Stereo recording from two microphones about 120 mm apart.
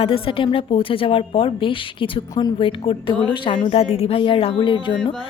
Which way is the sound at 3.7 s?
55° left (ahead or behind).